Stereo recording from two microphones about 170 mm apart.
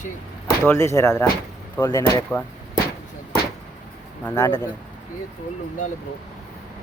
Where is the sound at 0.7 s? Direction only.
20° left (ahead or behind).